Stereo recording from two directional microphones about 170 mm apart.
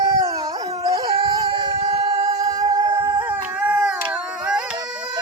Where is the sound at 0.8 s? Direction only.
20° right (ahead or behind).